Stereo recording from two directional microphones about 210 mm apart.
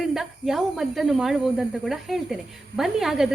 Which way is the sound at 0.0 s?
Centre (ahead or behind).